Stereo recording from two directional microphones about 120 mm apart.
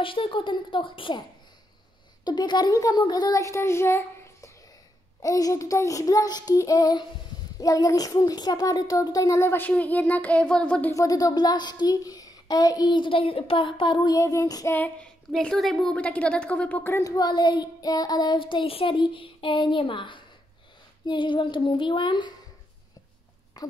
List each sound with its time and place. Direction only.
0.0 s a woman's voice: 45° left (ahead or behind)
2.2 s child singing: 35° left (ahead or behind)
3.0 s a child's voice: 35° left (ahead or behind); by 10.9 s 10° left (ahead or behind)
10.9 s child singing: 30° left (ahead or behind); by 14.0 s 45° left (ahead or behind)
14.0 s a child's voice: 30° left (ahead or behind)
14.7 s a woman's voice: 15° left (ahead or behind)
15.3 s a woman's voice: 5° left (ahead or behind)
17.0 s child singing: 30° left (ahead or behind)
21.1 s a woman's voice: 45° left (ahead or behind)
23.6 s a sound: 35° left (ahead or behind)